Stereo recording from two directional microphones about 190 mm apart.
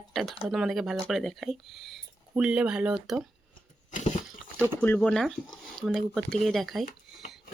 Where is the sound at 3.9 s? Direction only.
40° left (ahead or behind).